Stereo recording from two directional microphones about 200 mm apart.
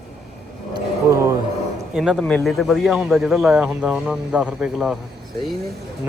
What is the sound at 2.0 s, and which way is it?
A man's voice, centre (ahead or behind).